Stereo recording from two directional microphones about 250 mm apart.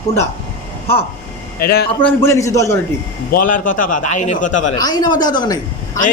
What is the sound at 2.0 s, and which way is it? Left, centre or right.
Speech, centre.